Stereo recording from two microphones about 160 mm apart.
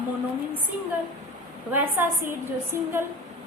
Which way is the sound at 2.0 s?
10° right (ahead or behind).